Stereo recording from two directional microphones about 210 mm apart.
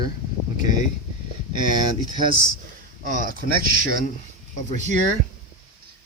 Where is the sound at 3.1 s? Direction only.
40° right (ahead or behind).